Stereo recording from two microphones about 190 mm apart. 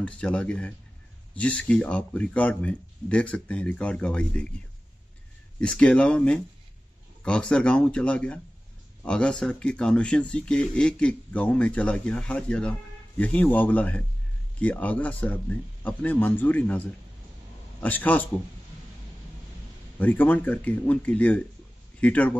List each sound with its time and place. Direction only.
0.0 s speech: 5° left (ahead or behind)
5.6 s speech: 5° left (ahead or behind)
20.0 s speech: 10° left (ahead or behind)